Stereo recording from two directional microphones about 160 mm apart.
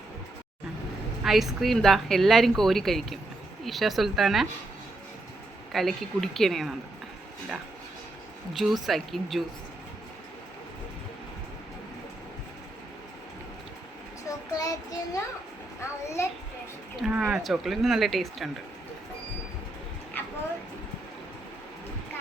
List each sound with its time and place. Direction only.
1.2 s a woman's voice: centre (ahead or behind)
5.7 s a woman's voice: centre (ahead or behind)
8.5 s a woman's voice: centre (ahead or behind)
14.3 s child singing: 25° left (ahead or behind)
16.2 s a child's voice: 15° left (ahead or behind)
17.0 s a woman's voice: 5° right (ahead or behind)